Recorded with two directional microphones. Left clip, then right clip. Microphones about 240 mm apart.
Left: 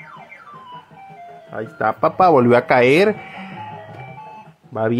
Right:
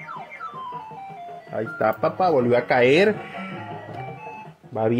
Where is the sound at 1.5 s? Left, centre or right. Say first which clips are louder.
Left 2 dB; centre.